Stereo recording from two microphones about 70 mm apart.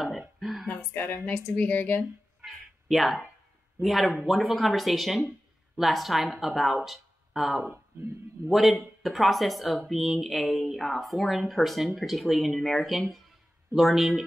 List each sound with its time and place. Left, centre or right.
0.4 s a sound: centre
0.9 s a woman's voice: left
2.4 s cat: centre
3.8 s speech: centre
7.6 s speech: right
8.5 s speech: centre